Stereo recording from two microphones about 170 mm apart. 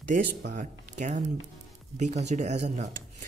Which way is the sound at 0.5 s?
45° right (ahead or behind).